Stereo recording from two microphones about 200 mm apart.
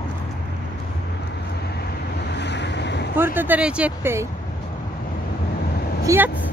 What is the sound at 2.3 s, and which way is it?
Waves, 60° left (ahead or behind).